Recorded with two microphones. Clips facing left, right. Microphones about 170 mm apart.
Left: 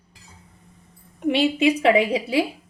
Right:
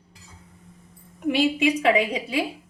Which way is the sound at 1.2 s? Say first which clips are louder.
Left 2 dB; 30° left (ahead or behind).